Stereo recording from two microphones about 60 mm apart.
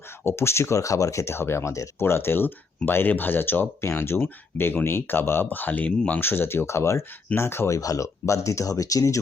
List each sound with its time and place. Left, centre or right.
0.3 s speech: left
2.0 s speech: left
6.1 s speech: left
7.7 s speech: left